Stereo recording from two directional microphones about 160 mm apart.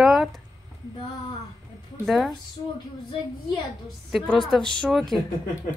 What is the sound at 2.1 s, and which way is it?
Speech, centre (ahead or behind).